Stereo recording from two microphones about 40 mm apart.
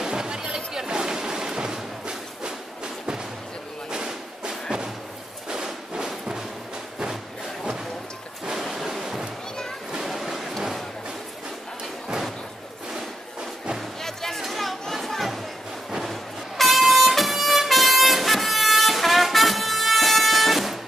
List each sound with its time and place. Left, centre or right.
0.0 s music: centre
3.9 s thump: centre
5.5 s music: centre
8.6 s waves: centre
9.9 s a sound: centre
14.0 s music: centre
14.4 s a sound: centre
16.0 s vehicle: centre